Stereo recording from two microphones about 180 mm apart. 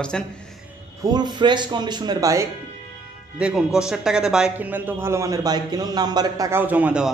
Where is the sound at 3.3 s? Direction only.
5° right (ahead or behind).